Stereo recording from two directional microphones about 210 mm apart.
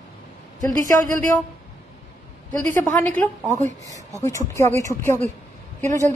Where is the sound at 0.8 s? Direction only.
40° right (ahead or behind).